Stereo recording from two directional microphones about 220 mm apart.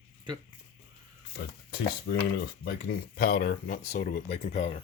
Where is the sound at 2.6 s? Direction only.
45° left (ahead or behind); by 4.8 s 25° left (ahead or behind).